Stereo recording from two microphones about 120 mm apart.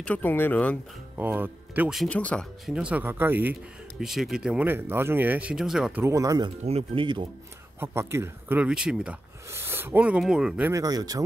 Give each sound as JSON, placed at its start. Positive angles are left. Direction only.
{"t": 0.0, "sound": "speech", "side_deg": 15}
{"t": 1.1, "sound": "speech", "side_deg": -15}
{"t": 2.0, "sound": "speech", "side_deg": 10}
{"t": 2.6, "sound": "speech", "side_deg": -10}
{"t": 4.0, "sound": "speech", "side_deg": -5}
{"t": 4.6, "sound": "speech", "side_deg": -20}
{"t": 6.0, "sound": "speech", "side_deg": -30}
{"t": 6.6, "sound": "speech", "side_deg": -55}
{"t": 7.8, "sound": "speech", "side_deg": -20}
{"t": 8.6, "sound": "speech", "side_deg": -5}
{"t": 9.5, "sound": "speech", "side_deg": -20}
{"t": 10.7, "sound": "speech", "side_deg": -30}